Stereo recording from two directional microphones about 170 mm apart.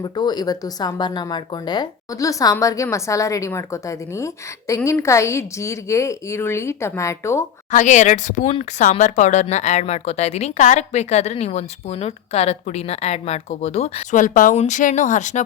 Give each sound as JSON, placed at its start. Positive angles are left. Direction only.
{"t": 0.0, "sound": "a woman's voice", "side_deg": 25}
{"t": 7.7, "sound": "speech", "side_deg": 45}
{"t": 14.2, "sound": "speech", "side_deg": 50}